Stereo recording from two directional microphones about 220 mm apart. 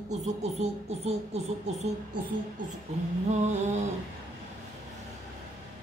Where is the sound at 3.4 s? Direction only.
30° right (ahead or behind).